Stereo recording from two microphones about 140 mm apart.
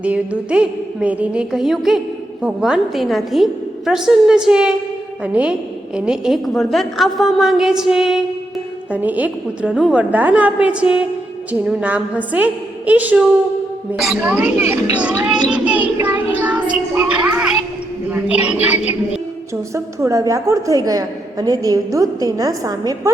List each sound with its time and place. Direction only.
0.0 s a woman's voice: 10° right (ahead or behind)
15.0 s child singing: 10° right (ahead or behind)
16.9 s a sound: 10° right (ahead or behind)
18.1 s a woman's voice: 10° right (ahead or behind)
19.7 s a woman's voice: 20° right (ahead or behind)